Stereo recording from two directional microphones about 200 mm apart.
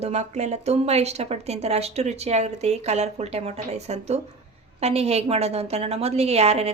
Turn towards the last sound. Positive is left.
turn(degrees=-30)  # may be behind; listen again after turning